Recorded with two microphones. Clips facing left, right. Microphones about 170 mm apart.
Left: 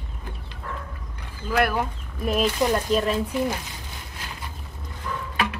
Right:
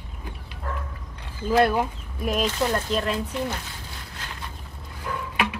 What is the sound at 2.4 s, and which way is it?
Speech, 15° left (ahead or behind).